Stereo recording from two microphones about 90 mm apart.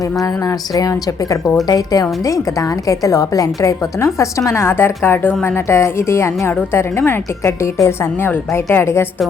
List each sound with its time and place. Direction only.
0.2 s a woman's voice: 45° left (ahead or behind); by 9.0 s 25° left (ahead or behind)